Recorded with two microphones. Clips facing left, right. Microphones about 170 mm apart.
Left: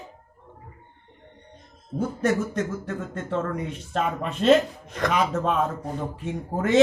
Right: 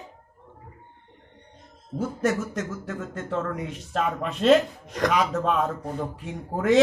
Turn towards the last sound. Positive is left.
turn(degrees=0)  # may be behind; listen again after turning